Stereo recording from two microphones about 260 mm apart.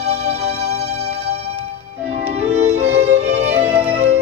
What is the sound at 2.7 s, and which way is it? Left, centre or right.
Music, right.